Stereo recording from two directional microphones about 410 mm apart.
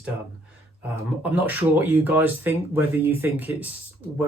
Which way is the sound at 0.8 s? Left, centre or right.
Centre.